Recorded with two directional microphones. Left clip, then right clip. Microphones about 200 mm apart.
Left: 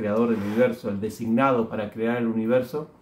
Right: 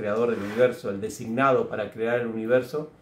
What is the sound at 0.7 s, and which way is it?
Speech, 10° right (ahead or behind).